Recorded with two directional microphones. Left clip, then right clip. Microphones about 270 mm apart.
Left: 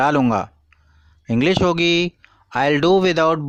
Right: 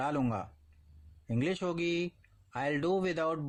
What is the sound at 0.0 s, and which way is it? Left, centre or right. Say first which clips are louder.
Speech: left 16 dB; left.